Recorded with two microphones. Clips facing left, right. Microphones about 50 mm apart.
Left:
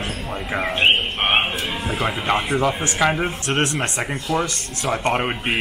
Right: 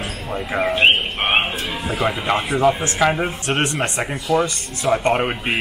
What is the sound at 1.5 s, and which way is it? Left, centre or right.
Speech, centre.